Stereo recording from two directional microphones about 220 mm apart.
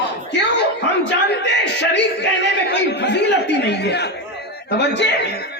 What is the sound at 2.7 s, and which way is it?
A man's voice, 50° left (ahead or behind).